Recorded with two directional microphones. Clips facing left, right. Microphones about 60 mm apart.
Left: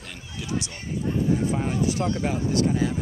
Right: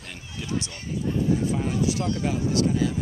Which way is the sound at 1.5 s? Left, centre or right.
Left.